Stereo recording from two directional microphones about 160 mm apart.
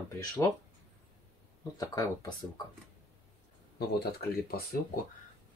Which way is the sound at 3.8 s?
75° left (ahead or behind).